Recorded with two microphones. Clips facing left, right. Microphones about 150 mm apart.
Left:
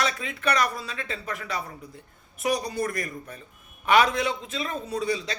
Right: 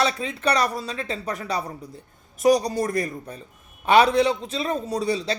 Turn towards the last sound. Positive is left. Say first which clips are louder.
# right 3 dB
turn(degrees=-35)  # may be behind; listen again after turning